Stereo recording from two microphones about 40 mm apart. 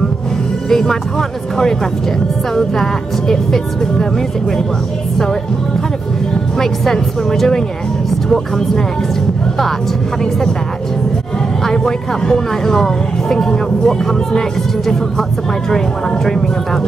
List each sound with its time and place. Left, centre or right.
0.7 s speech: centre
2.5 s speech: centre
6.6 s speech: centre
11.6 s speech: centre
16.3 s speech: centre